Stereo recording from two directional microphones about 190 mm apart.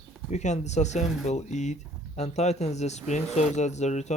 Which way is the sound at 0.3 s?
35° left (ahead or behind).